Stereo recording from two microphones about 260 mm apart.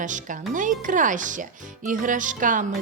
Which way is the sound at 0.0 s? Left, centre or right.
Right.